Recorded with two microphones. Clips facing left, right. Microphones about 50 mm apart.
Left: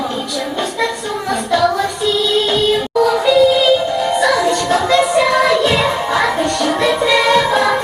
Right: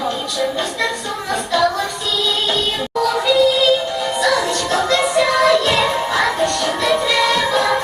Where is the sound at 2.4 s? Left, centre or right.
Centre.